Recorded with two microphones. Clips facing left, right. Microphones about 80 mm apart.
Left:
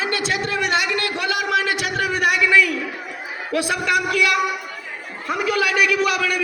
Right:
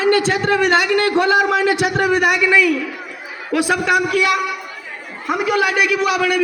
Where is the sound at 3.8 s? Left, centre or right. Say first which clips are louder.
Right 3 dB; right.